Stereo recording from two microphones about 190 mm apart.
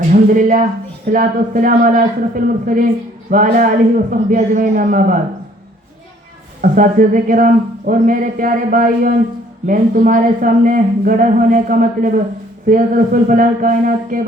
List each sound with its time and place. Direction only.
0.1 s speech: 45° right (ahead or behind)
6.6 s speech: 45° right (ahead or behind)